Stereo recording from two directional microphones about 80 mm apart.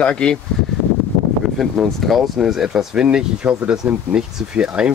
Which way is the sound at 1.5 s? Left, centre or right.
Centre.